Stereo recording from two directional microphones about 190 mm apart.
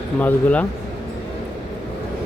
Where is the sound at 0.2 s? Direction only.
10° left (ahead or behind).